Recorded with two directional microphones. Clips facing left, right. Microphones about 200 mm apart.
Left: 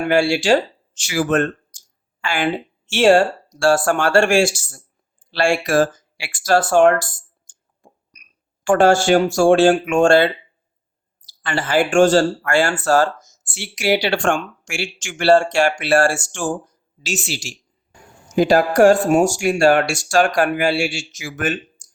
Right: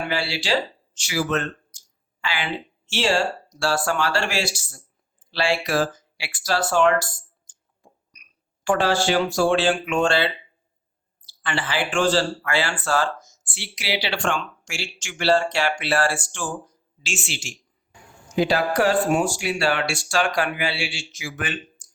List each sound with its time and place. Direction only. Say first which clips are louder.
0.0 s speech: left 10 dB; 50° left (ahead or behind)
7.4 s clicking: left 8 dB; 50° left (ahead or behind)
11.3 s speech: left 6 dB; 40° left (ahead or behind)